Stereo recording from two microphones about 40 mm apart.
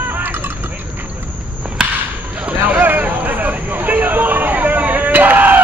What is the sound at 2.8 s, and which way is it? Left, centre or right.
Hubbub, right.